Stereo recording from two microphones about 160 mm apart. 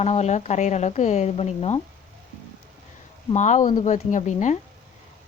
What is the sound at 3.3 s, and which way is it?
A woman's voice, 50° left (ahead or behind).